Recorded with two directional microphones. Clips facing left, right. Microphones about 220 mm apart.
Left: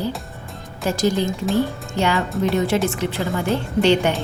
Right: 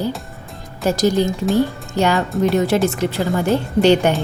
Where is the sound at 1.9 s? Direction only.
40° right (ahead or behind).